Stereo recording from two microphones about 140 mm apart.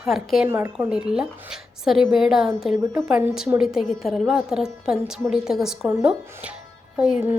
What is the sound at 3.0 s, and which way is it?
A woman's voice, 5° right (ahead or behind).